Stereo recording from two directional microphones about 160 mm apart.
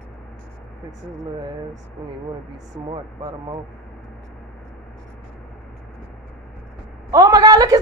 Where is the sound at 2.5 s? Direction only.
20° right (ahead or behind).